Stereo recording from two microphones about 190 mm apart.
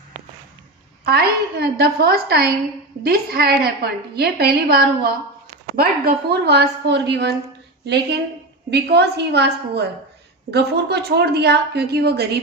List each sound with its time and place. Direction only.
1.0 s a woman's voice: 55° right (ahead or behind)
8.7 s a woman's voice: 60° right (ahead or behind)